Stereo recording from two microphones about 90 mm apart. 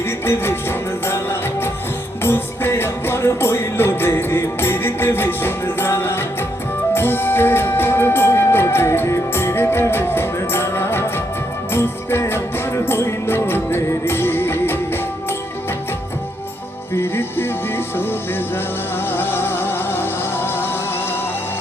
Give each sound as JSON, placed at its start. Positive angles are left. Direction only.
{"t": 0.3, "sound": "music", "side_deg": 25}
{"t": 16.9, "sound": "music", "side_deg": 25}